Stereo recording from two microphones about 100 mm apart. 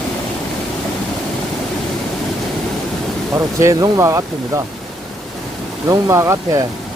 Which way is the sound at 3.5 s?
30° right (ahead or behind).